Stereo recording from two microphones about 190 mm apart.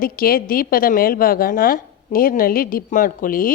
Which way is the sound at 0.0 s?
50° left (ahead or behind).